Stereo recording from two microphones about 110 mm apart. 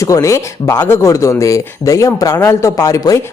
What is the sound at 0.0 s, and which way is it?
Speech, 30° left (ahead or behind).